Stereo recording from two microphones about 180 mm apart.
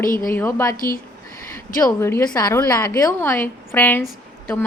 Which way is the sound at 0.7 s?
50° left (ahead or behind).